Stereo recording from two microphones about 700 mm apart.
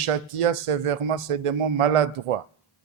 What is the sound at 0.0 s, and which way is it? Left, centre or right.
Speech, right.